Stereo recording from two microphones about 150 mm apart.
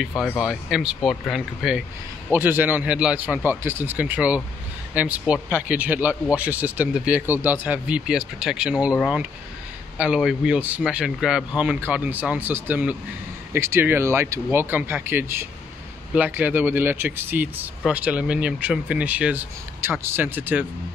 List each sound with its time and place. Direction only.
0.4 s speech: 5° right (ahead or behind)